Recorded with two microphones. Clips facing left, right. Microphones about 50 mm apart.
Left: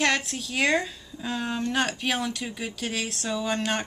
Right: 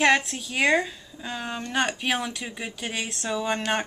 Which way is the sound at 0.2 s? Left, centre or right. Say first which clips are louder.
Right 1 dB; centre.